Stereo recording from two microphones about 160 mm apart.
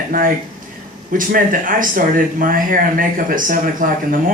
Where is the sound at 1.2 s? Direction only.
60° right (ahead or behind).